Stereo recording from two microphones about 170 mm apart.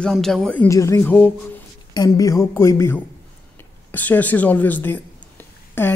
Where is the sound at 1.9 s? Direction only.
20° left (ahead or behind).